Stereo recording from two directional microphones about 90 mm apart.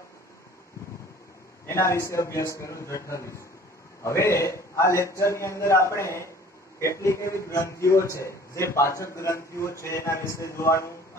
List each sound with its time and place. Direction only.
1.7 s a man's voice: 30° left (ahead or behind)